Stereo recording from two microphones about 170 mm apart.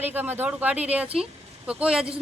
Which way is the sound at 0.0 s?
10° right (ahead or behind).